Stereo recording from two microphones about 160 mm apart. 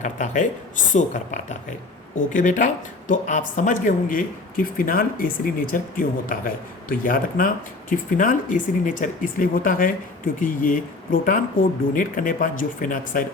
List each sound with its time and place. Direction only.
0.0 s speech: 50° left (ahead or behind)